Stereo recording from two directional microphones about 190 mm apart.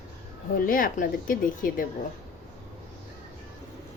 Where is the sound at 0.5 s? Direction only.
50° left (ahead or behind).